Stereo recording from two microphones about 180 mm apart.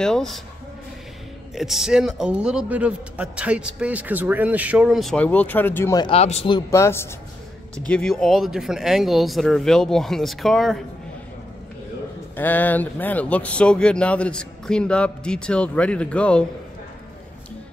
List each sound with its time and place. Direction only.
0.0 s speech: 5° left (ahead or behind)
1.5 s speech: centre (ahead or behind)
5.9 s speech: 30° left (ahead or behind)
6.7 s speech: 15° left (ahead or behind)
12.4 s speech: 10° left (ahead or behind)